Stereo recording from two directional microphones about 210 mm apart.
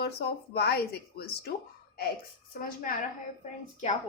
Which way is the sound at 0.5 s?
50° left (ahead or behind).